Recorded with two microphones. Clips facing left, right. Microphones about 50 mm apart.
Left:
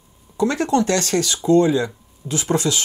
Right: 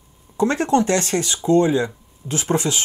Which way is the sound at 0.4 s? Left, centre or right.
Right.